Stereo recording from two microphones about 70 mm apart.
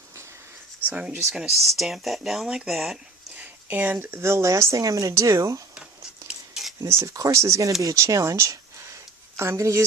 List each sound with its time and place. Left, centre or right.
0.9 s speech: right
1.3 s speech: centre
3.3 s a sound: right
3.9 s speech: right
5.7 s cutlery: centre
6.8 s speech: right
7.1 s speech: right